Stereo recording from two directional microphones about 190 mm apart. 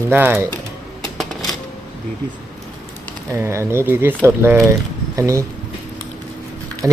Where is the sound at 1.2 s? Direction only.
Centre (ahead or behind).